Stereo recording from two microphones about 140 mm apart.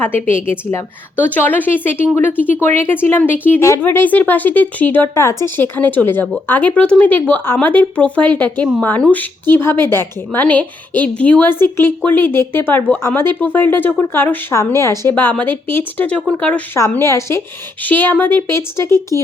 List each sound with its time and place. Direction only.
0.3 s speech: 15° left (ahead or behind)
16.7 s a woman's voice: 20° left (ahead or behind)